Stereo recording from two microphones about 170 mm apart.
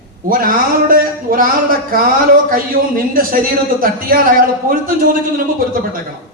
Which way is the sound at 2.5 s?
55° right (ahead or behind).